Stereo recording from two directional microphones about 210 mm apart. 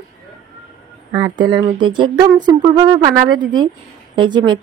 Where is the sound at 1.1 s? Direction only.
20° right (ahead or behind).